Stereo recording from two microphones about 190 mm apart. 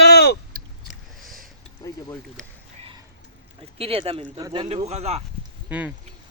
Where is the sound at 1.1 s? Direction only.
Centre (ahead or behind).